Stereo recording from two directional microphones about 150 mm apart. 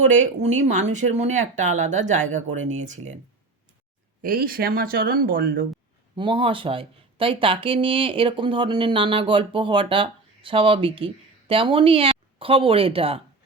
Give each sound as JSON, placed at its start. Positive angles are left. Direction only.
{"t": 0.4, "sound": "speech", "side_deg": -50}
{"t": 4.2, "sound": "speech", "side_deg": -75}
{"t": 6.1, "sound": "speech", "side_deg": -35}